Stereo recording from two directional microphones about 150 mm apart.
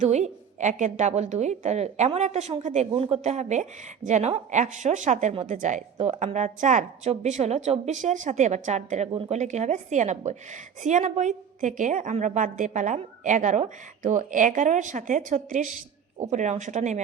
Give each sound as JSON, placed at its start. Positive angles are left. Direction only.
{"t": 0.0, "sound": "a woman's voice", "side_deg": -50}